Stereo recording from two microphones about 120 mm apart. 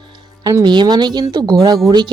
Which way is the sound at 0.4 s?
35° right (ahead or behind).